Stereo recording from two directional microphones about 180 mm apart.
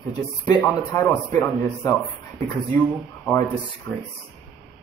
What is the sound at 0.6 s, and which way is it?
A man's voice, 15° left (ahead or behind).